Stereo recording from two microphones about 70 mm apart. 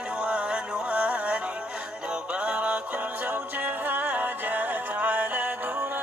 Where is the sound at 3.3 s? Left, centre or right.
Right.